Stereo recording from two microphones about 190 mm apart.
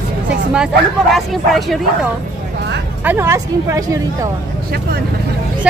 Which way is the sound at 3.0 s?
10° right (ahead or behind).